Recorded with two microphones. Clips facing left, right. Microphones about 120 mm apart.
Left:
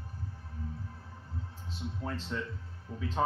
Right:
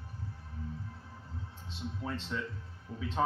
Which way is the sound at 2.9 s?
30° left (ahead or behind).